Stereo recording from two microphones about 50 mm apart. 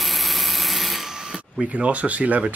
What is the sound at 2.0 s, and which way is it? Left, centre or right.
Speech, right.